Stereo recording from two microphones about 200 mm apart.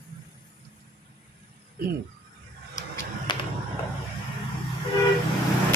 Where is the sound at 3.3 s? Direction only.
20° left (ahead or behind).